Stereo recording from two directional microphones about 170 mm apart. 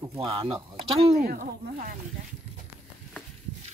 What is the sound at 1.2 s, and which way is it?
Speech, 55° right (ahead or behind).